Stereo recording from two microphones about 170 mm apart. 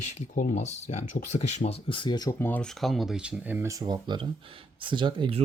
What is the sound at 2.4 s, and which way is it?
Speech, 10° left (ahead or behind).